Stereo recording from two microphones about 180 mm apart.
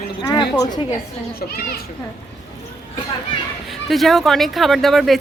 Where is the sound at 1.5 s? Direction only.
55° left (ahead or behind).